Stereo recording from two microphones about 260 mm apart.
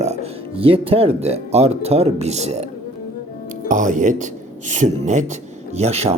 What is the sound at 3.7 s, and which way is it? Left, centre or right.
Speech, right.